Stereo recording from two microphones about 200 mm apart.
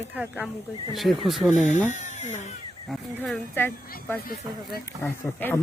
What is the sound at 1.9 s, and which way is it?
Speech, 35° left (ahead or behind).